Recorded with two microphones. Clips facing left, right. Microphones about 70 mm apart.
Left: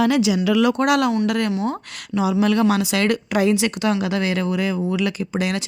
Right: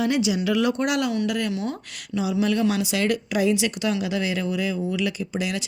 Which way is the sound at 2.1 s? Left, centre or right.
Left.